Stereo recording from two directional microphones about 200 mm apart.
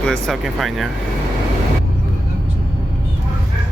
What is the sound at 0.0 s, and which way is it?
Speech, centre (ahead or behind).